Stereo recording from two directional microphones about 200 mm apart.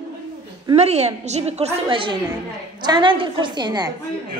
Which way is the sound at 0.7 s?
35° right (ahead or behind).